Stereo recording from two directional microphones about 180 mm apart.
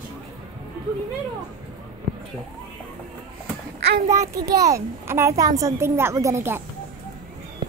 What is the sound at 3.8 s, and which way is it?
Child singing, 65° right (ahead or behind).